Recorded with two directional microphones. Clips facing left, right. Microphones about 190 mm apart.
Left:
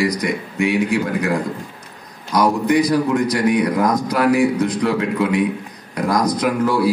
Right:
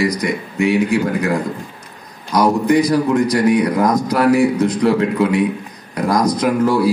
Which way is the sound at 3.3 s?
45° right (ahead or behind).